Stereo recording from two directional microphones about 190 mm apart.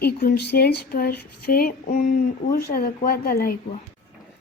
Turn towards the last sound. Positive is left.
turn(degrees=50)  # may be behind; listen again after turning